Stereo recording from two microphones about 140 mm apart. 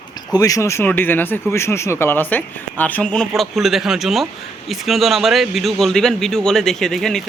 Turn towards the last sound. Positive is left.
turn(degrees=5)  # may be behind; listen again after turning